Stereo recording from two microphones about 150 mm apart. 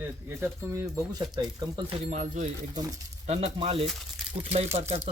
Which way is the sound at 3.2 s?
45° right (ahead or behind).